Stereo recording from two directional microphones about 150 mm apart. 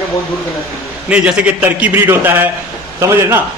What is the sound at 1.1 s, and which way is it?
A man's voice, 5° right (ahead or behind).